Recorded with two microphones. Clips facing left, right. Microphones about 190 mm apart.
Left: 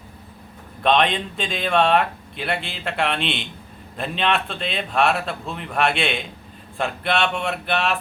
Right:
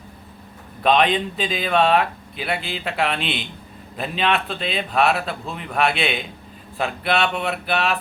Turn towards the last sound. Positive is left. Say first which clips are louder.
# right 1 dB
turn(degrees=0)  # may be behind; listen again after turning